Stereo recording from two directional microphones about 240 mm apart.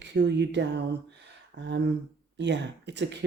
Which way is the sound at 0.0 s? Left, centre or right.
Right.